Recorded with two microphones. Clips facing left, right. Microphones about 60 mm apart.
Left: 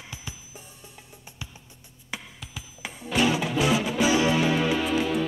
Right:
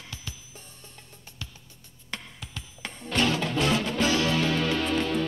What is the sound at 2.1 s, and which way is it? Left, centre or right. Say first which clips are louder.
Music: left 1 dB; centre.